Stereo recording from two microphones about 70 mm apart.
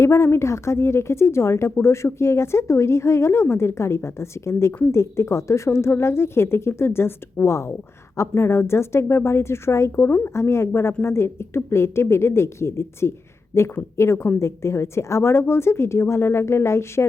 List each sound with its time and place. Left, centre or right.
0.0 s speech: left
9.9 s speech: left
10.3 s speech: left